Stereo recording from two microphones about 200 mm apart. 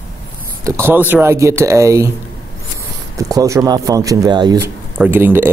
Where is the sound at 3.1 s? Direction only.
15° right (ahead or behind).